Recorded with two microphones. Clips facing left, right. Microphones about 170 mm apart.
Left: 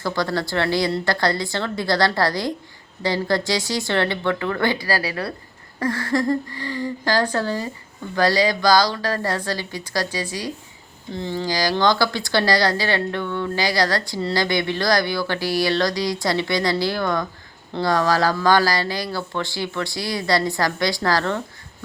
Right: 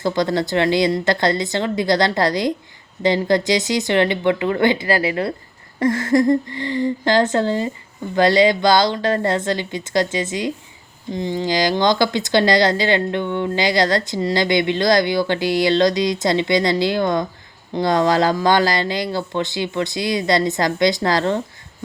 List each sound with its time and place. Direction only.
0.0 s speech: 20° right (ahead or behind)